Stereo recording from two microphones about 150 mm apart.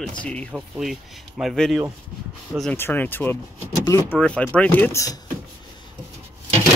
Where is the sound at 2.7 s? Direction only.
15° left (ahead or behind).